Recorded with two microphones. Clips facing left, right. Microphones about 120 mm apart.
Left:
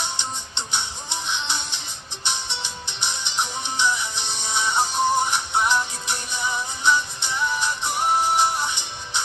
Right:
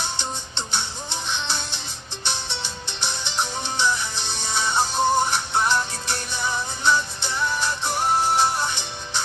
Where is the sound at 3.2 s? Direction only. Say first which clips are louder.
Right 1 dB; 15° left (ahead or behind).